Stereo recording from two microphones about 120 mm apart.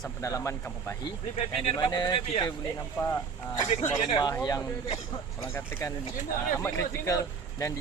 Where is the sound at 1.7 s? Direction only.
35° left (ahead or behind).